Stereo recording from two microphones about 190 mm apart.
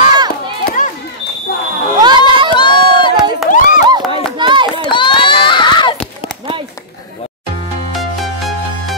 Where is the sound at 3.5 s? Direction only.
45° left (ahead or behind).